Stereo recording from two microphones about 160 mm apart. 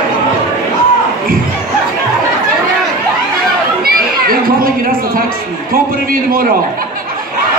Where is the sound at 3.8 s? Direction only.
65° right (ahead or behind).